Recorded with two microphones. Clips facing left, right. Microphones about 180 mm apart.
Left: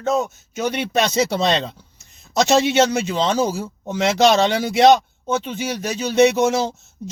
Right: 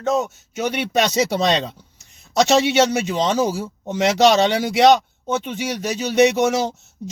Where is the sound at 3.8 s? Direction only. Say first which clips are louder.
Right 1 dB; 15° right (ahead or behind).